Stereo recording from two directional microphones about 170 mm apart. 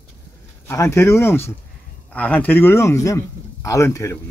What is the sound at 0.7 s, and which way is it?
A man's voice, 15° left (ahead or behind).